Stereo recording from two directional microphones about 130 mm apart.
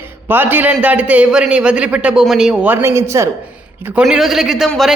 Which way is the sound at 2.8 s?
20° right (ahead or behind).